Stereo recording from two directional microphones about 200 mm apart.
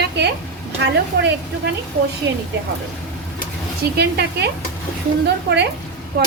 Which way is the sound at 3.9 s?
55° right (ahead or behind).